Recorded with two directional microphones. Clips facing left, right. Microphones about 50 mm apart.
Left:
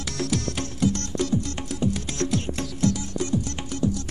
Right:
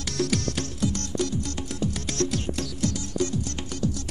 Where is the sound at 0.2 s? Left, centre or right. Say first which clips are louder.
Right 2 dB; left.